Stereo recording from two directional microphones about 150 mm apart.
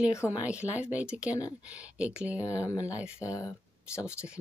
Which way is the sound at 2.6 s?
20° left (ahead or behind).